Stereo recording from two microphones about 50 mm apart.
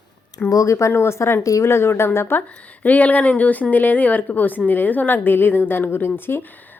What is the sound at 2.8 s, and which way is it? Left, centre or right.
A woman's voice, left.